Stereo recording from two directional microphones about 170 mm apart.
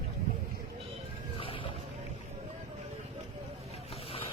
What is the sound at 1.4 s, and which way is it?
Boat, 30° left (ahead or behind).